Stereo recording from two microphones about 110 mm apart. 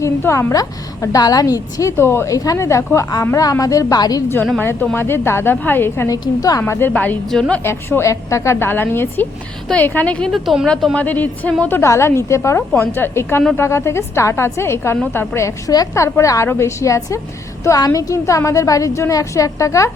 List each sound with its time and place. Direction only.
0.0 s a woman's voice: 25° left (ahead or behind)
2.0 s a woman's voice: 25° left (ahead or behind)
4.6 s a woman's voice: 20° left (ahead or behind)
6.1 s a woman's voice: 35° left (ahead or behind)
6.6 s a woman's voice: 20° left (ahead or behind)
7.3 s a woman's voice: 5° left (ahead or behind)
7.6 s a woman's voice: 20° left (ahead or behind); by 10.9 s centre (ahead or behind)
10.9 s a woman's voice: 15° left (ahead or behind)
11.8 s a woman's voice: 25° left (ahead or behind)